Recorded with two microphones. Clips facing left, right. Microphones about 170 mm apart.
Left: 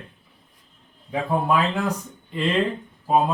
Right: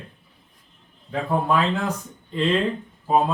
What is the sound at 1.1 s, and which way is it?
Speech, 10° left (ahead or behind).